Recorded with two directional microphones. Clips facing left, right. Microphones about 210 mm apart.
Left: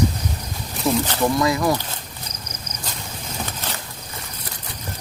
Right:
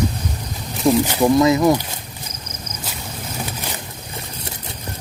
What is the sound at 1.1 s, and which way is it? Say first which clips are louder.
Speech: right 5 dB; 15° right (ahead or behind).